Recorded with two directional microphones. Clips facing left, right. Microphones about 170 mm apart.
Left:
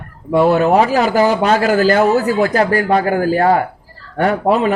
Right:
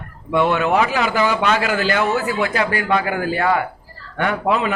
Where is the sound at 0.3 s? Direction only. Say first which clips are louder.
Left 5 dB; 40° left (ahead or behind).